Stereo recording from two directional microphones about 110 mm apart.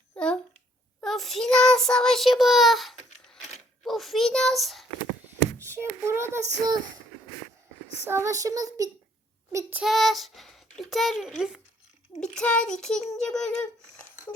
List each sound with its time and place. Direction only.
1.0 s child singing: centre (ahead or behind)
3.8 s a child's voice: centre (ahead or behind)
5.5 s a sound: 25° right (ahead or behind)
6.1 s child singing: 25° right (ahead or behind)
6.7 s speech: 35° right (ahead or behind)
8.0 s speech: 25° right (ahead or behind)
9.5 s child singing: 25° right (ahead or behind)
9.8 s a child's voice: centre (ahead or behind)